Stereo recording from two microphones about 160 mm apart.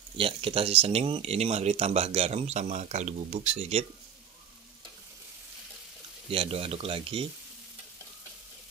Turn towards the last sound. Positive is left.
turn(degrees=-35)  # may be behind; listen again after turning